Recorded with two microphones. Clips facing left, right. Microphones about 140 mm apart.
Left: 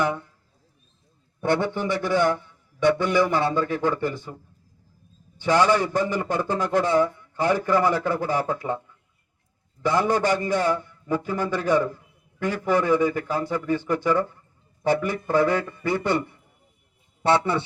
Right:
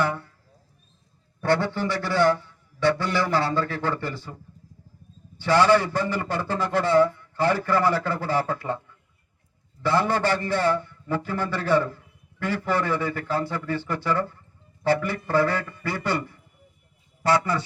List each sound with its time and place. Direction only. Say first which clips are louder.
0.0 s a sound: left 1 dB; 15° left (ahead or behind)
1.4 s a man's voice: even; 20° left (ahead or behind)
5.4 s a man's voice: right 1 dB; 15° left (ahead or behind)
9.8 s a man's voice: left 1 dB; 15° left (ahead or behind)